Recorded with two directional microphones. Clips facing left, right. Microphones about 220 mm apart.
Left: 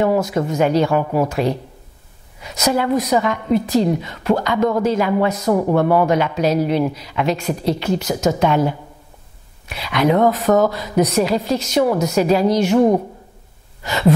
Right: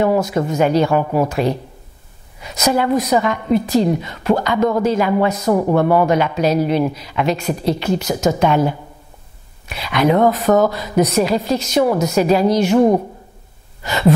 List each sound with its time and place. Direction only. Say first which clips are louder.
0.0 s speech: right 1 dB; 20° right (ahead or behind)
2.7 s speech: right 1 dB; 15° right (ahead or behind)
3.2 s speech: right 1 dB; 25° right (ahead or behind)
5.4 s speech: right 1 dB; 30° right (ahead or behind); by 8.1 s 10° right (ahead or behind)
8.1 s speech: right 1 dB; 25° right (ahead or behind)
9.8 s speech: right 1 dB; 15° right (ahead or behind)
11.8 s speech: right 1 dB; 25° right (ahead or behind)
12.2 s speech: right 1 dB; 15° right (ahead or behind)
12.7 s a woman's voice: right 1 dB; 35° right (ahead or behind)